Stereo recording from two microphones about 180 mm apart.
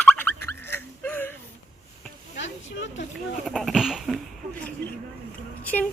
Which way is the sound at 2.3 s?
90° left.